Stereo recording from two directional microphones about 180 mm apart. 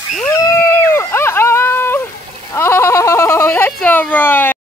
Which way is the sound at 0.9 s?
15° left (ahead or behind).